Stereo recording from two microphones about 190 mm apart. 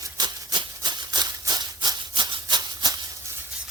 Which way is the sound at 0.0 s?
20° right (ahead or behind).